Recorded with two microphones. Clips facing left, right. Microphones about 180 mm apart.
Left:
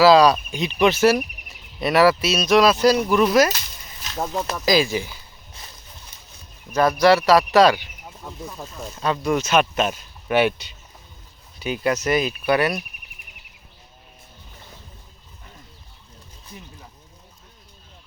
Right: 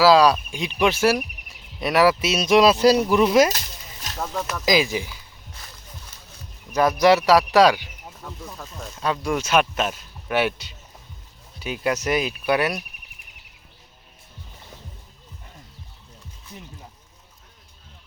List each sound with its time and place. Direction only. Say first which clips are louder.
0.0 s speech: left 2 dB; 5° right (ahead or behind)
4.2 s speech: left 3 dB; 30° left (ahead or behind)
4.6 s speech: left 1 dB; 15° right (ahead or behind)
6.7 s speech: left 1 dB; 15° right (ahead or behind)
8.2 s speech: left 1 dB; 20° left (ahead or behind)
9.0 s speech: left 2 dB; centre (ahead or behind)